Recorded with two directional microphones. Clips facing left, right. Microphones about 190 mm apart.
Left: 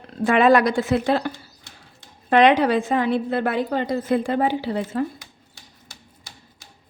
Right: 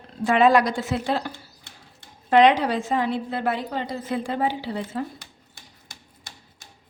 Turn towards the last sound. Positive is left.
turn(degrees=55)  # may be behind; listen again after turning